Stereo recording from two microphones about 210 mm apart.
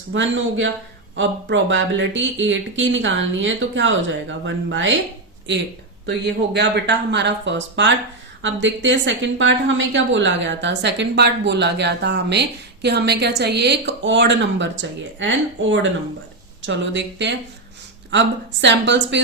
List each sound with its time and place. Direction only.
0.1 s a woman's voice: 65° right (ahead or behind)
6.1 s a woman's voice: 55° right (ahead or behind)